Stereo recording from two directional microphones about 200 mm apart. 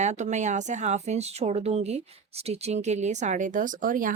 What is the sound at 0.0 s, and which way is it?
Speech, 35° right (ahead or behind).